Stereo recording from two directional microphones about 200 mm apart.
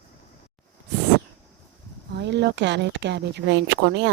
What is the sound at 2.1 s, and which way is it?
Speech, 60° right (ahead or behind).